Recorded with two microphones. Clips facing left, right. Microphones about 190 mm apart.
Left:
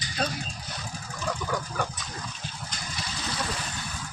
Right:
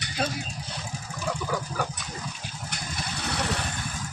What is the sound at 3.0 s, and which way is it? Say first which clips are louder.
Vehicle: right 3 dB; 65° right (ahead or behind).